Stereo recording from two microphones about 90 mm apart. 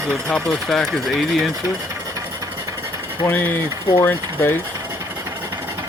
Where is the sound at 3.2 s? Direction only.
20° left (ahead or behind).